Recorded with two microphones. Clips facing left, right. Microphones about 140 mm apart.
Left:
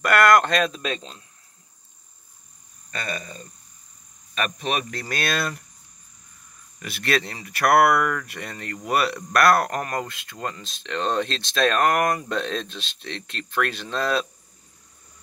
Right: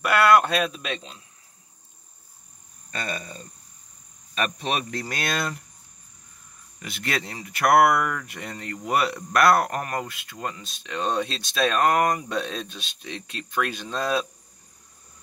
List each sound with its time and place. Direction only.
0.0 s speech: 10° right (ahead or behind)
3.1 s speech: 30° right (ahead or behind)
6.8 s speech: 20° right (ahead or behind)